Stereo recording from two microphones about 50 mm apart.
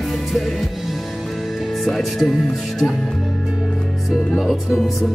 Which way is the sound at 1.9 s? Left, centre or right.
Centre.